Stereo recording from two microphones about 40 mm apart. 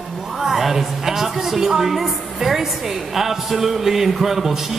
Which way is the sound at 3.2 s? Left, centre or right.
Centre.